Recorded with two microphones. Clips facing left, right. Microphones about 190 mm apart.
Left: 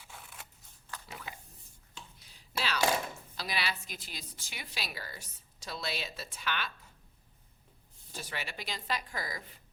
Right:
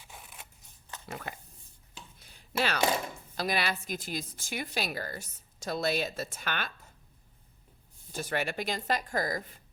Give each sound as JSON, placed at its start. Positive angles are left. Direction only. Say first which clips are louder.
{"t": 0.0, "sound": "scissors", "louder": "right 1 dB", "side_deg": -15}
{"t": 1.0, "sound": "speech", "louder": "right 9 dB", "side_deg": -55}
{"t": 2.1, "sound": "a sound", "louder": "right 7 dB", "side_deg": -55}
{"t": 3.3, "sound": "a woman's voice", "louder": "right 7 dB", "side_deg": -50}
{"t": 8.1, "sound": "a woman's voice", "louder": "right 9 dB", "side_deg": -50}